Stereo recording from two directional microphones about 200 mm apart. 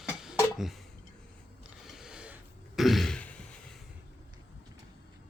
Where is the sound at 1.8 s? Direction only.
Centre (ahead or behind).